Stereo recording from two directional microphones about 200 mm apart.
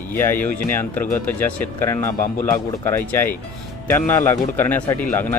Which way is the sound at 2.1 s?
40° left (ahead or behind).